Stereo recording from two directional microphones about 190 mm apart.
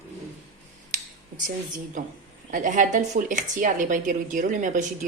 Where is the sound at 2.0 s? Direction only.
45° right (ahead or behind).